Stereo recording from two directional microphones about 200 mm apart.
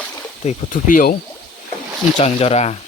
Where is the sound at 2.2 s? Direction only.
30° left (ahead or behind).